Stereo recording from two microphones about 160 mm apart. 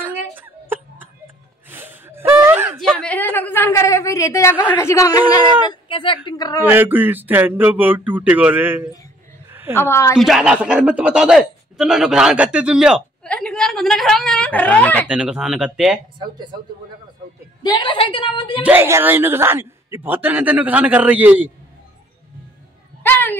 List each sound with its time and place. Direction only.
0.0 s chuckle: 10° right (ahead or behind)
2.8 s a sound: 5° left (ahead or behind); by 5.4 s 20° left (ahead or behind)
5.7 s a woman's voice: 30° left (ahead or behind)
6.6 s a man's voice: 10° right (ahead or behind)
9.5 s a sound: 15° right (ahead or behind)
9.8 s a woman's voice: 15° left (ahead or behind)
10.1 s a man's voice: centre (ahead or behind)
15.0 s speech: 5° right (ahead or behind)
17.6 s a woman's voice: 30° left (ahead or behind)
18.6 s a man's voice: 15° right (ahead or behind)
23.0 s a sound: 10° left (ahead or behind)